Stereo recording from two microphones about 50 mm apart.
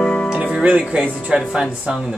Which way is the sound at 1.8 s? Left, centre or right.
Centre.